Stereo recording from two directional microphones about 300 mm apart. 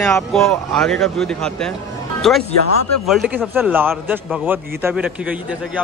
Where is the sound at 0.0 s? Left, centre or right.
Centre.